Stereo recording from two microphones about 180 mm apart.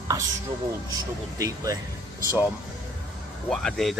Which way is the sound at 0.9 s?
20° right (ahead or behind).